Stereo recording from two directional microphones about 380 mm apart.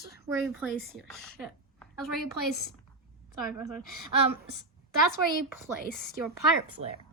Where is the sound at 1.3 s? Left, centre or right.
Centre.